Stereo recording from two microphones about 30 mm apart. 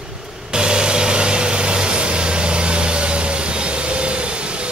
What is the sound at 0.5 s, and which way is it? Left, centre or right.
Vehicle, right.